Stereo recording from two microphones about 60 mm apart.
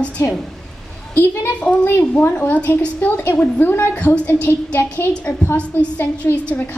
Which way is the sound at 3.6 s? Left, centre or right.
Left.